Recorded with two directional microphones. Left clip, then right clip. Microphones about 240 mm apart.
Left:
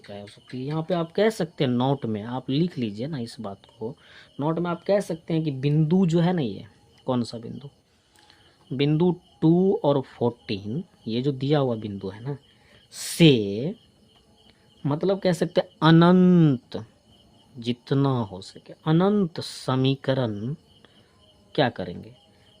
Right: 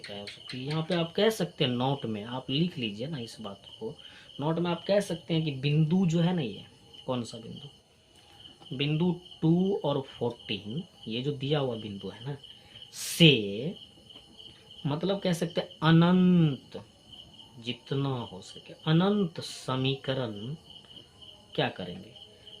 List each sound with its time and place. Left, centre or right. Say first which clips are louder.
0.1 s speech: left 5 dB; left
8.7 s speech: left 8 dB; left
14.8 s speech: left 7 dB; left
21.5 s speech: left 7 dB; left